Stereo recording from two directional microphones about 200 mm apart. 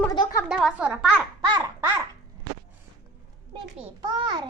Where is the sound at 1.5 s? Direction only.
20° right (ahead or behind).